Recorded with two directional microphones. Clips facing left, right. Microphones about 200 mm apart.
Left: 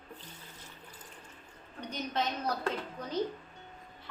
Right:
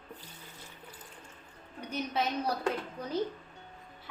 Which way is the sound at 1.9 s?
10° right (ahead or behind).